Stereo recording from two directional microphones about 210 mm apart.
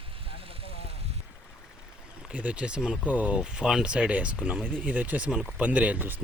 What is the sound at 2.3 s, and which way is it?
Speech, 5° right (ahead or behind).